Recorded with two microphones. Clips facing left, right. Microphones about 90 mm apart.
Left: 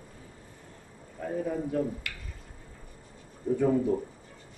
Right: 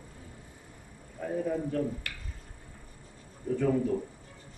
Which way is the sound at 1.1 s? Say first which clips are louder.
Even; centre (ahead or behind).